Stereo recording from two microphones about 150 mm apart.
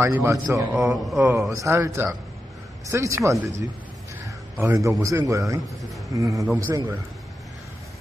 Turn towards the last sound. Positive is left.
turn(degrees=-20)  # may be behind; listen again after turning